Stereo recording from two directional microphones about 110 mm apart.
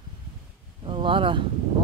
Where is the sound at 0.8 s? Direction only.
50° right (ahead or behind).